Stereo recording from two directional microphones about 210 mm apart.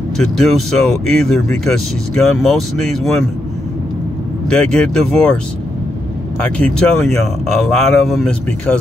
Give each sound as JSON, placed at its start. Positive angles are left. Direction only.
{"t": 0.2, "sound": "speech", "side_deg": 0}
{"t": 4.5, "sound": "speech", "side_deg": 5}
{"t": 6.4, "sound": "speech", "side_deg": 5}